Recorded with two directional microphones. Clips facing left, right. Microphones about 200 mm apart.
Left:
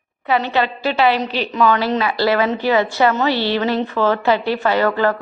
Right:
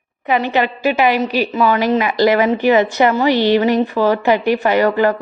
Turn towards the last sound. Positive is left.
turn(degrees=-15)  # may be behind; listen again after turning